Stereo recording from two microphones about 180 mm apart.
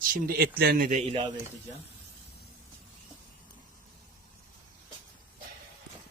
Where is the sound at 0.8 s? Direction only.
45° right (ahead or behind).